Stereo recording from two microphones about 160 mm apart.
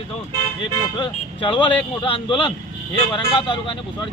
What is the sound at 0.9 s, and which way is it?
Speech, 30° left (ahead or behind).